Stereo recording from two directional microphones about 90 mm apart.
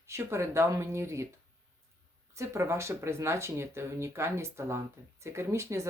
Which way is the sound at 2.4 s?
30° right (ahead or behind).